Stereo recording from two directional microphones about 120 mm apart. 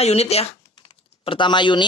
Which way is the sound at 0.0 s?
60° left (ahead or behind).